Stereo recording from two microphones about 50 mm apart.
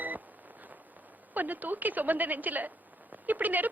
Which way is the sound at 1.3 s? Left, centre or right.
Right.